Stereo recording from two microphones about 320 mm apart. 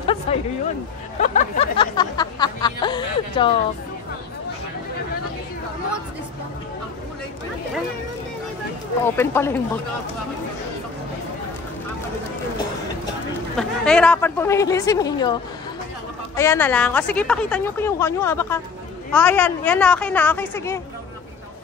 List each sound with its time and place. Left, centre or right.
0.0 s a sound: centre
1.2 s music: left
9.0 s music: centre
13.6 s music: centre
16.3 s music: centre
19.1 s a woman's voice: centre